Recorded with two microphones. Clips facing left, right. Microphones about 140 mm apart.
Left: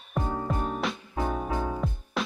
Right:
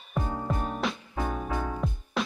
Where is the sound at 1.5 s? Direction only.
15° left (ahead or behind).